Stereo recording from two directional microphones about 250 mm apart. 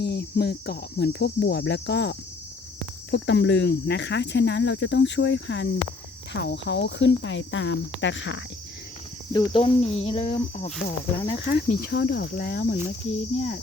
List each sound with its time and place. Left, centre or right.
0.0 s cricket: left
3.1 s speech: left
9.3 s speech: centre
11.4 s cricket: left